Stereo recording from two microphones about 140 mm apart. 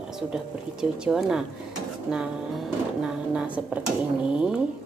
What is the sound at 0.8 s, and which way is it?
Speech, 5° right (ahead or behind).